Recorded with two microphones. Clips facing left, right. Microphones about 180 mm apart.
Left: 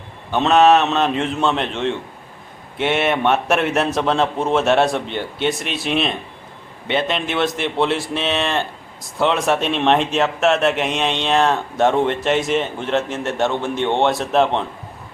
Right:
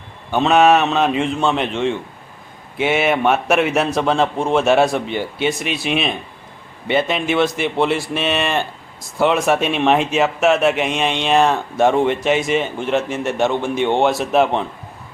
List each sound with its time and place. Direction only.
0.3 s speech: 5° right (ahead or behind)